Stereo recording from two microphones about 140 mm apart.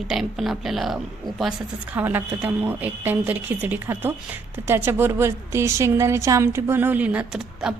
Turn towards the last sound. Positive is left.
turn(degrees=-5)  # may be behind; listen again after turning